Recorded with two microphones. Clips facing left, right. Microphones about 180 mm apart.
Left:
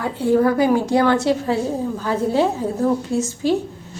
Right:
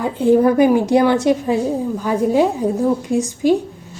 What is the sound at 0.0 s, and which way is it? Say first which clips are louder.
A woman's voice: right 3 dB; 20° right (ahead or behind).